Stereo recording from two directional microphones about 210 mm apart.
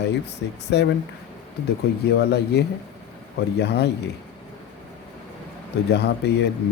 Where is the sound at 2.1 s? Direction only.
50° left (ahead or behind).